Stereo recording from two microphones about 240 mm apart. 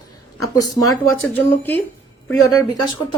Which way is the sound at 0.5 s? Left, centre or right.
Centre.